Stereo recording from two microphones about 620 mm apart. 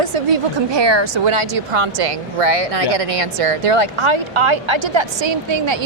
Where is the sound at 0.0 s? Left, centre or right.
Right.